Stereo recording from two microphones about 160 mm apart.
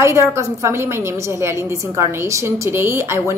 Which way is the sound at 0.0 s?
15° right (ahead or behind).